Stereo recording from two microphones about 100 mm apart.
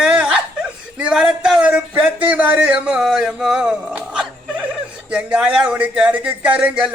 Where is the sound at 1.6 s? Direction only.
15° right (ahead or behind).